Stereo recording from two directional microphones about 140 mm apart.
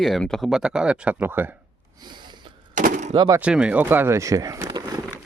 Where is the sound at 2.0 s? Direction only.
35° right (ahead or behind).